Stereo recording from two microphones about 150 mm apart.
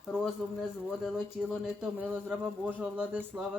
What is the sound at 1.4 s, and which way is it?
Speech, 5° right (ahead or behind).